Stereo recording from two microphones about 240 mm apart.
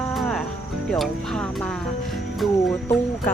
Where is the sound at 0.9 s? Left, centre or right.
Centre.